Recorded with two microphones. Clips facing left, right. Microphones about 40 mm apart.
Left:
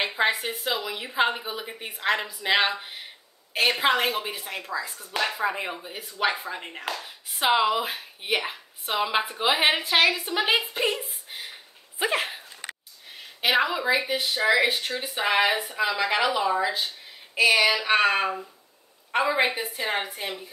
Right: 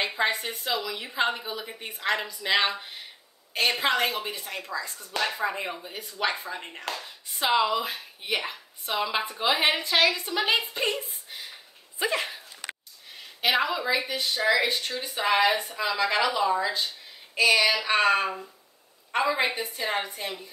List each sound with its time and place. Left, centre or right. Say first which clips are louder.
0.0 s speech: left 2 dB; centre
11.2 s a sound: left 2 dB; left
12.0 s speech: left 2 dB; left
13.4 s speech: left 2 dB; centre
13.8 s speech: left 3 dB; left